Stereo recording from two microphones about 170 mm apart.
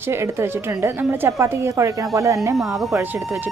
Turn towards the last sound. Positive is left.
turn(degrees=-15)  # may be behind; listen again after turning